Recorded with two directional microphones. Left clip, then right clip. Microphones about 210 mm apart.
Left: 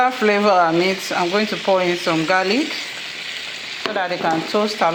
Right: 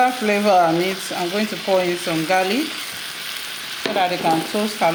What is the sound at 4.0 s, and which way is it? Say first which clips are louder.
Speech: right 2 dB; 10° left (ahead or behind).